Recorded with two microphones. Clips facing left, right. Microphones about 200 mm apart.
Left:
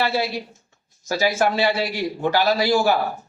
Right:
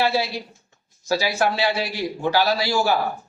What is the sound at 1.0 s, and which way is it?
A man's voice, 50° left (ahead or behind).